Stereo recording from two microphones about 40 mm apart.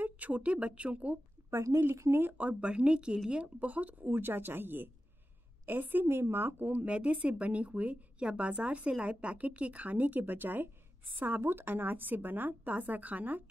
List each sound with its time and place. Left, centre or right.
0.0 s speech: right
1.8 s a woman's voice: right
2.3 s speech: right
3.5 s speech: right
4.1 s a woman's voice: right
6.7 s a woman's voice: right